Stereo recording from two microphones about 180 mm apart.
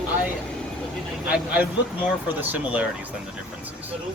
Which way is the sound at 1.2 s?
5° right (ahead or behind).